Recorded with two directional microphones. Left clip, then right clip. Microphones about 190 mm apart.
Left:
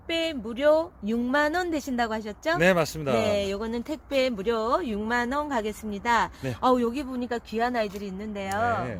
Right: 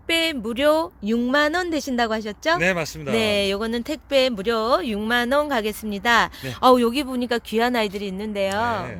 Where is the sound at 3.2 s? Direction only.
50° right (ahead or behind).